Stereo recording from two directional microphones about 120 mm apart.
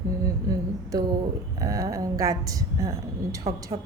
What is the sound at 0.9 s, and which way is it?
A woman's voice, 30° right (ahead or behind).